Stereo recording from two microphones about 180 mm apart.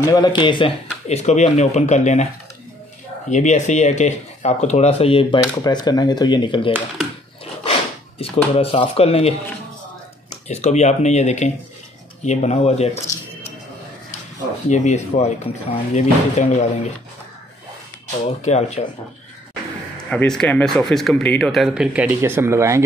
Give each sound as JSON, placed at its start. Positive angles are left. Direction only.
{"t": 0.0, "sound": "speech", "side_deg": 20}
{"t": 1.0, "sound": "speech", "side_deg": 40}
{"t": 3.3, "sound": "speech", "side_deg": 40}
{"t": 5.4, "sound": "speech", "side_deg": 20}
{"t": 8.2, "sound": "speech", "side_deg": 35}
{"t": 10.5, "sound": "speech", "side_deg": 40}
{"t": 14.7, "sound": "speech", "side_deg": 40}
{"t": 18.4, "sound": "speech", "side_deg": 40}
{"t": 20.1, "sound": "speech", "side_deg": 5}